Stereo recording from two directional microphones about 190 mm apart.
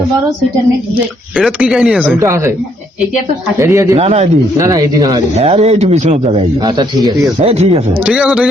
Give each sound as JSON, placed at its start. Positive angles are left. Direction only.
{"t": 1.4, "sound": "speech", "side_deg": -5}
{"t": 2.2, "sound": "speech", "side_deg": -15}
{"t": 3.6, "sound": "speech", "side_deg": -15}
{"t": 3.9, "sound": "a man's voice", "side_deg": -35}
{"t": 4.5, "sound": "speech", "side_deg": -15}
{"t": 5.4, "sound": "a man's voice", "side_deg": -30}
{"t": 8.0, "sound": "speech", "side_deg": -5}